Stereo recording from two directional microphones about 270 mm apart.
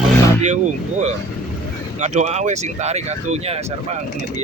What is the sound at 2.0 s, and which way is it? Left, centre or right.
Speech, right.